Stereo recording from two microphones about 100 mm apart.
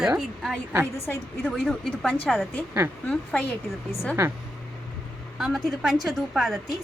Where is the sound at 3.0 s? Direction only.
15° left (ahead or behind).